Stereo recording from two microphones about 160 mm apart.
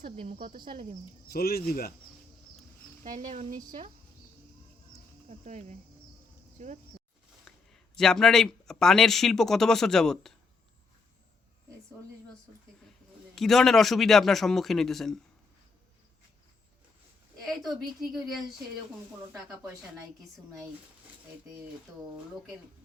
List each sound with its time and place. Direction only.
0.0 s speech: 40° right (ahead or behind)
0.3 s speech: 65° right (ahead or behind)
1.3 s speech: 75° left (ahead or behind)
3.0 s speech: 55° right (ahead or behind)
5.3 s speech: 45° right (ahead or behind)
7.4 s a man's voice: 5° left (ahead or behind)
13.3 s a man's voice: centre (ahead or behind)
17.4 s a man's voice: centre (ahead or behind)